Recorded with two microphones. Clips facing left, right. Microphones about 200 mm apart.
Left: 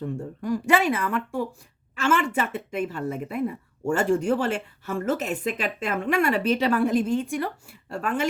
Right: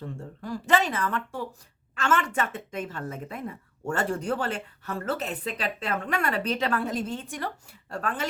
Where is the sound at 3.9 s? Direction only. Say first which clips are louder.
Left 6 dB; 40° right (ahead or behind).